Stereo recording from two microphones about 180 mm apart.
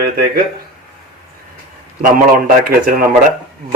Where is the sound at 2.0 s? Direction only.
50° right (ahead or behind).